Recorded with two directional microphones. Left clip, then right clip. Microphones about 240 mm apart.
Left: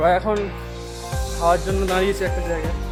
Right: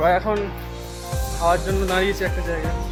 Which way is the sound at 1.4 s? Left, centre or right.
Centre.